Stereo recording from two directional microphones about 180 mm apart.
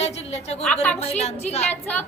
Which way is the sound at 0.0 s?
35° left (ahead or behind).